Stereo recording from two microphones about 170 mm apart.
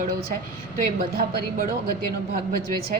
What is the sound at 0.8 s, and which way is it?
Speech, 60° right (ahead or behind).